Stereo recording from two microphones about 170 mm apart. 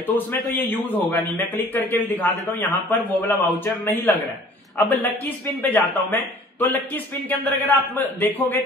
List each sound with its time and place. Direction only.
0.0 s a man's voice: 10° left (ahead or behind)